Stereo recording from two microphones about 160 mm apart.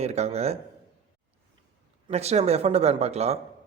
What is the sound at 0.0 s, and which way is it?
Speech, 45° right (ahead or behind).